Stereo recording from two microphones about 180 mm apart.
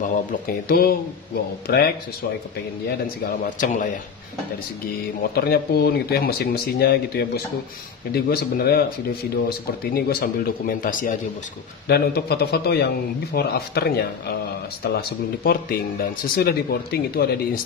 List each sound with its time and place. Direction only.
0.0 s speech: 45° left (ahead or behind)
3.4 s a man's voice: 45° left (ahead or behind)
5.3 s speech: 60° left (ahead or behind)
9.9 s a man's voice: 55° left (ahead or behind)
11.9 s speech: 60° left (ahead or behind)